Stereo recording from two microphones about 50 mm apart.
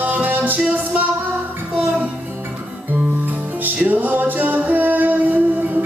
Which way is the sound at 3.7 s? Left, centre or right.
Right.